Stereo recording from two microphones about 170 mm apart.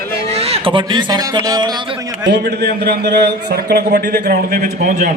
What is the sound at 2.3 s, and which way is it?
A man's voice, 75° right (ahead or behind).